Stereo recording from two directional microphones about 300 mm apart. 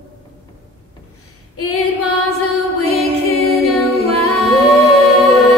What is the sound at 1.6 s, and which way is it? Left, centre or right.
Female singing, left.